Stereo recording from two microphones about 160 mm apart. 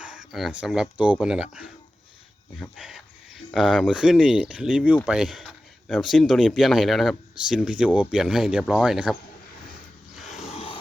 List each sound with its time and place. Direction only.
0.0 s speech: 5° right (ahead or behind)
10.5 s vehicle: 35° left (ahead or behind)